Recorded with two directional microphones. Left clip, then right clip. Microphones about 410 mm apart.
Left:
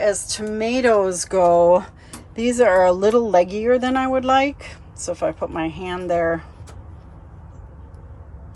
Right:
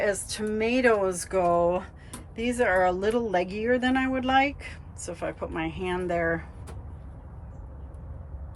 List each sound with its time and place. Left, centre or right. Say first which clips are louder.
0.0 s speech: left 7 dB; centre